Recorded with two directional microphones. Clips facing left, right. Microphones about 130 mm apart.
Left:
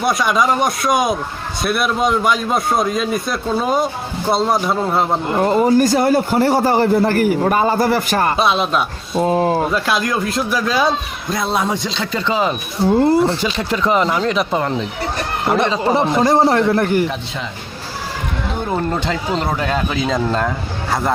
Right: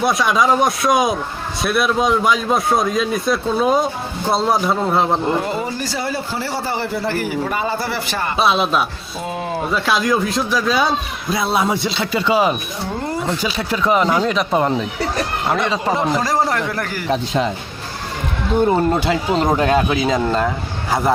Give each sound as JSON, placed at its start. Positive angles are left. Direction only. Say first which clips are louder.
{"t": 0.0, "sound": "speech", "louder": "even", "side_deg": 0}
{"t": 5.4, "sound": "a man's voice", "louder": "left 9 dB", "side_deg": 45}
{"t": 8.4, "sound": "speech", "louder": "even", "side_deg": 0}
{"t": 9.1, "sound": "speech", "louder": "left 10 dB", "side_deg": 40}
{"t": 9.7, "sound": "speech", "louder": "right 1 dB", "side_deg": 0}
{"t": 13.1, "sound": "speech", "louder": "left 8 dB", "side_deg": 30}
{"t": 13.4, "sound": "speech", "louder": "left 1 dB", "side_deg": 0}
{"t": 16.2, "sound": "a man's voice", "louder": "left 6 dB", "side_deg": 25}
{"t": 17.1, "sound": "speech", "louder": "right 7 dB", "side_deg": -40}
{"t": 18.7, "sound": "speech", "louder": "right 3 dB", "side_deg": -10}